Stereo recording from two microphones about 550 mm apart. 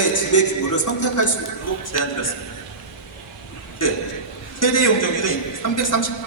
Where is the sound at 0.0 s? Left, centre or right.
Left.